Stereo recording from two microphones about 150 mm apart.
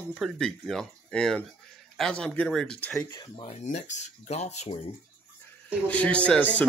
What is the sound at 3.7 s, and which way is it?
Speech, 55° left (ahead or behind).